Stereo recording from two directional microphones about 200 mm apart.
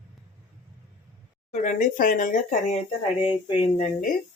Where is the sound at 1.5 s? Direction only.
40° left (ahead or behind).